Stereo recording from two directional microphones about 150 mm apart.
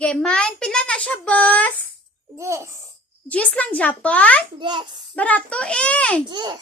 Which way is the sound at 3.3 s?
10° left (ahead or behind).